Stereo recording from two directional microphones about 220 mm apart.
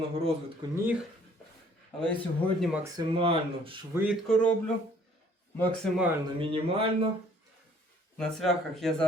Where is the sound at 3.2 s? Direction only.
25° right (ahead or behind).